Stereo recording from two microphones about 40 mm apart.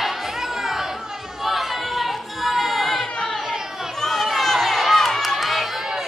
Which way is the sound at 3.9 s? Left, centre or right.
Centre.